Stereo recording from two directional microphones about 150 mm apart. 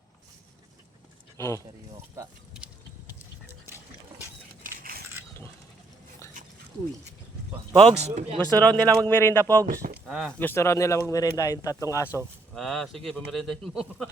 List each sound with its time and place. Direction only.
1.4 s speech: 20° left (ahead or behind)
4.6 s a sound: 75° right (ahead or behind)
7.9 s speech: 45° right (ahead or behind)
8.5 s speech: 10° left (ahead or behind)
9.6 s speech: 75° right (ahead or behind)
10.1 s speech: centre (ahead or behind)
10.4 s speech: 15° left (ahead or behind)
12.0 s speech: 15° right (ahead or behind)
12.5 s speech: centre (ahead or behind)